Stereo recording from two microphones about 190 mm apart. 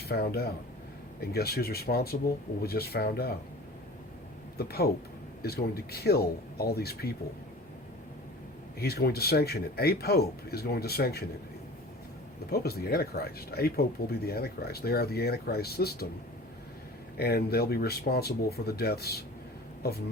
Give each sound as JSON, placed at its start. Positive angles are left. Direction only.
{"t": 0.1, "sound": "speech", "side_deg": 55}
{"t": 4.5, "sound": "speech", "side_deg": 55}
{"t": 8.8, "sound": "speech", "side_deg": 55}
{"t": 12.5, "sound": "speech", "side_deg": 55}
{"t": 17.2, "sound": "speech", "side_deg": 55}